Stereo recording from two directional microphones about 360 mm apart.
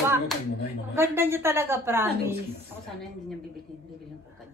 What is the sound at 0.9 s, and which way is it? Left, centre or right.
A woman's voice, centre.